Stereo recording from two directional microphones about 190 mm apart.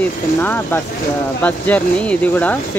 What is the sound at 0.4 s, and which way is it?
Speech, 10° left (ahead or behind).